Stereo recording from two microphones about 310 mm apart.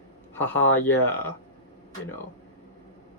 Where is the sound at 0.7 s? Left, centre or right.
Centre.